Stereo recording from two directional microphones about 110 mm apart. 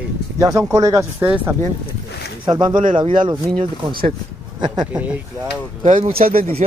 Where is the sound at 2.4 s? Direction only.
40° right (ahead or behind).